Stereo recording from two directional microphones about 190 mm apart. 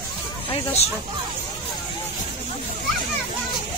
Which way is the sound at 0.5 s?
30° left (ahead or behind).